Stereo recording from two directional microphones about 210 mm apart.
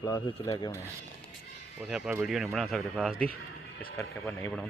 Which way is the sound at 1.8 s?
5° right (ahead or behind).